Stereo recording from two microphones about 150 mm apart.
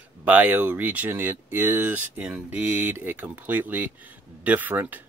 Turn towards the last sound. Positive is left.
turn(degrees=-10)  # may be behind; listen again after turning